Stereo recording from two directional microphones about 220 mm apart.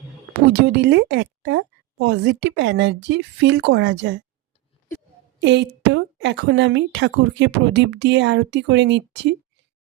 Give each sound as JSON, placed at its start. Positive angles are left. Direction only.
{"t": 0.3, "sound": "a woman's voice", "side_deg": -50}
{"t": 5.4, "sound": "speech", "side_deg": -55}